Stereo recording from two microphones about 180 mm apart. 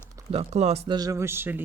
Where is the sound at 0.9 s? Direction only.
20° right (ahead or behind).